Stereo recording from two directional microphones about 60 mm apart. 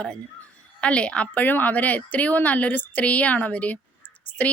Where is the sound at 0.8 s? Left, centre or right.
Centre.